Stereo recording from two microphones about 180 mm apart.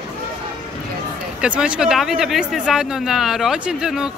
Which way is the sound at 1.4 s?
5° right (ahead or behind).